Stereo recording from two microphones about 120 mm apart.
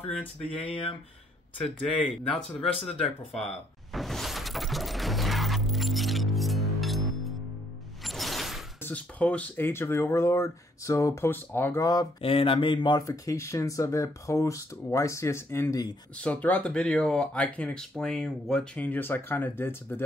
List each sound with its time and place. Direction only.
0.6 s speech: 55° left (ahead or behind)
1.6 s speech: 5° left (ahead or behind)
3.9 s music: centre (ahead or behind)
8.0 s mechanisms: centre (ahead or behind)
8.8 s speech: 10° left (ahead or behind)
9.7 s speech: 20° left (ahead or behind)
11.8 s speech: 35° left (ahead or behind)
12.2 s speech: 50° left (ahead or behind)
13.0 s speech: 25° left (ahead or behind)